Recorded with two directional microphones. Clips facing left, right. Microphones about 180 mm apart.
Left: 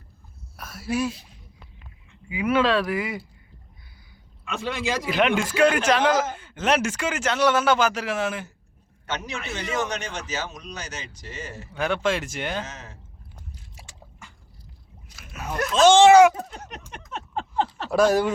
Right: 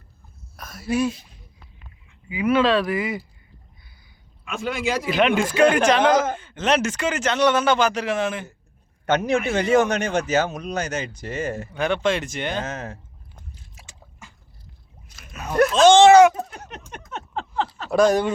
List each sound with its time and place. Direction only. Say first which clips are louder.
0.5 s speech: right 3 dB; 5° left (ahead or behind)
2.3 s speech: right 2 dB; 10° left (ahead or behind)
2.8 s a man's voice: right 3 dB; centre (ahead or behind)
4.4 s speech: right 2 dB; 5° right (ahead or behind)
5.7 s a man's voice: right 3 dB; 5° left (ahead or behind)
9.0 s speech: right 11 dB; 55° right (ahead or behind)
11.8 s a man's voice: right 2 dB; 5° left (ahead or behind)
12.6 s speech: right 10 dB; 55° right (ahead or behind)
15.1 s splash: right 1 dB; 5° left (ahead or behind)
15.8 s speech: right 1 dB; 10° left (ahead or behind)
17.9 s a man's voice: right 2 dB; 5° left (ahead or behind)